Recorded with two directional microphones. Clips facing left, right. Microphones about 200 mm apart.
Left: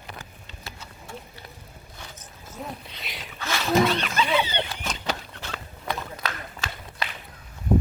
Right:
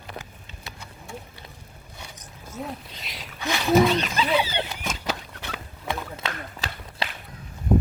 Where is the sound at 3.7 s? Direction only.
5° right (ahead or behind).